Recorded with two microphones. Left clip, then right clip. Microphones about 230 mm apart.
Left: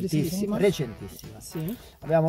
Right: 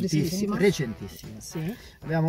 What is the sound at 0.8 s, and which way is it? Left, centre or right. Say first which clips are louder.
Speech: right 1 dB; centre.